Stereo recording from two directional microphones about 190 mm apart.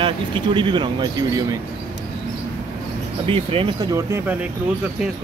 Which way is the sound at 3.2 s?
30° right (ahead or behind).